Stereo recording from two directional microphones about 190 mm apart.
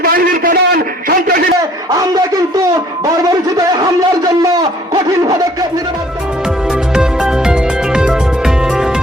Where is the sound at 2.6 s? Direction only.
20° right (ahead or behind).